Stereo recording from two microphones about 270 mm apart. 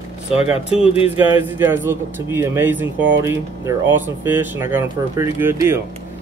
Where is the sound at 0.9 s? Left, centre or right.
Left.